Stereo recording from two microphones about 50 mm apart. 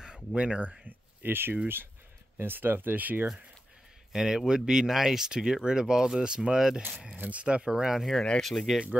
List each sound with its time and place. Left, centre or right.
0.0 s speech: right
4.1 s speech: centre
7.2 s speech: right; by 8.0 s centre
8.0 s speech: centre